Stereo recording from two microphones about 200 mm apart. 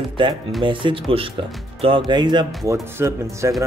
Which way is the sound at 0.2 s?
25° right (ahead or behind).